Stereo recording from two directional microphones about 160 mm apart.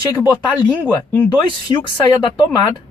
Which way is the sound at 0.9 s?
10° left (ahead or behind).